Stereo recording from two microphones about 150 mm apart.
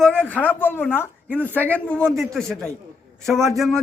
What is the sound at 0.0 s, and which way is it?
A woman's voice, 10° left (ahead or behind).